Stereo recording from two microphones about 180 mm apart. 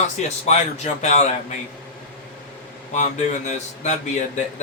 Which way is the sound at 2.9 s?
40° left (ahead or behind).